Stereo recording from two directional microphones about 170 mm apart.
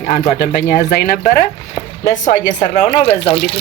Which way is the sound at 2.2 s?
45° left (ahead or behind).